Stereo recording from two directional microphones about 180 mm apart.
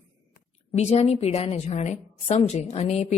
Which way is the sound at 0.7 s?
35° left (ahead or behind).